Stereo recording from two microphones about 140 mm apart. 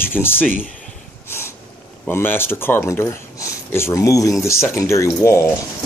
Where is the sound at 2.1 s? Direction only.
15° left (ahead or behind).